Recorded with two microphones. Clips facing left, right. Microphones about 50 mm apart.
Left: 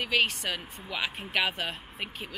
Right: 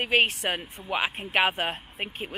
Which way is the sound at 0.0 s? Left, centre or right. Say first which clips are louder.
Right 4 dB; right.